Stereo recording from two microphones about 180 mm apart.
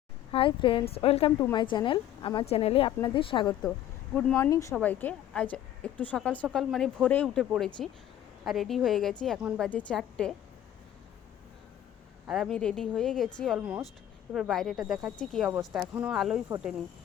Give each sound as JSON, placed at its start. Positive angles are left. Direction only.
{"t": 0.3, "sound": "speech", "side_deg": 30}
{"t": 1.4, "sound": "a woman's voice", "side_deg": 20}
{"t": 4.1, "sound": "speech", "side_deg": 5}
{"t": 4.4, "sound": "a woman's voice", "side_deg": 15}
{"t": 12.3, "sound": "speech", "side_deg": 0}